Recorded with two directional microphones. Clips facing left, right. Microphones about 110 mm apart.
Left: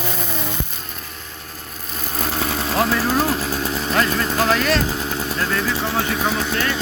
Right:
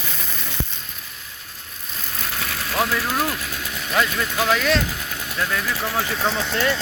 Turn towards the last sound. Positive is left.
turn(degrees=10)  # may be behind; listen again after turning